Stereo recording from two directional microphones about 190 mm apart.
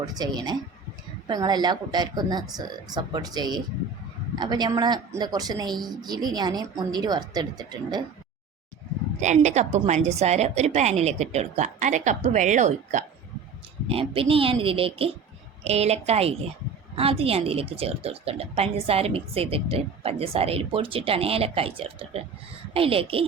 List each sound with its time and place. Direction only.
0.0 s a woman's voice: 20° right (ahead or behind)
9.2 s a woman's voice: 40° right (ahead or behind)
13.8 s a woman's voice: 30° right (ahead or behind)